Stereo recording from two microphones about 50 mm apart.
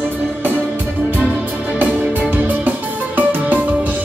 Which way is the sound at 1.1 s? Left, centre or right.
Right.